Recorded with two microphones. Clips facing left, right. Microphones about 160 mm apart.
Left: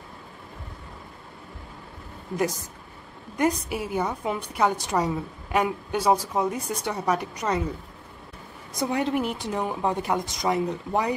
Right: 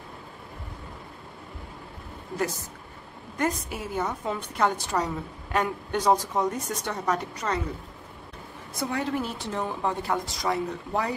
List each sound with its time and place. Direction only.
2.3 s a woman's voice: 15° left (ahead or behind)
8.7 s a woman's voice: 20° left (ahead or behind)